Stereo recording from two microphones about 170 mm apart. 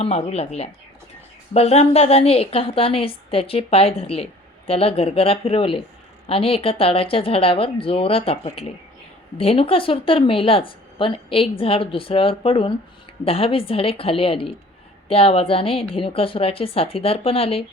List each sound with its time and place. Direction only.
0.0 s a woman's voice: 35° left (ahead or behind)